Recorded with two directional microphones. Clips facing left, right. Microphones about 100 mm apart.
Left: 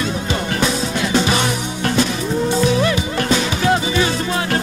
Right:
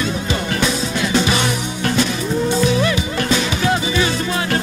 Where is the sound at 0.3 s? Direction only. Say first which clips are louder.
Left 1 dB; 40° left (ahead or behind).